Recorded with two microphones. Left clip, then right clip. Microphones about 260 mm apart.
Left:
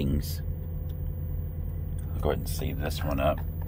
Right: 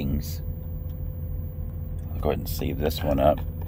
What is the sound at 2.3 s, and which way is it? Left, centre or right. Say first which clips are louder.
Speech: right 4 dB; centre.